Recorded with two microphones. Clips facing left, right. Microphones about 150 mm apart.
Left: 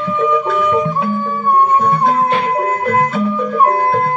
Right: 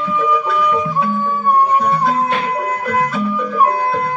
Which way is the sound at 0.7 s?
25° left (ahead or behind).